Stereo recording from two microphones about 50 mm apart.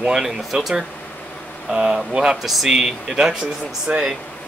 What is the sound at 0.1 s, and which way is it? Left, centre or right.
Speech, centre.